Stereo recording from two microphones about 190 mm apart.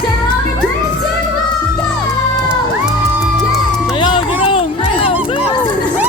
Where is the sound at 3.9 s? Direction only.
25° left (ahead or behind).